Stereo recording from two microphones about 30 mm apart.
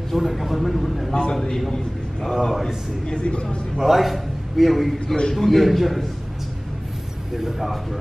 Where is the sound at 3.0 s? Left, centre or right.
Left.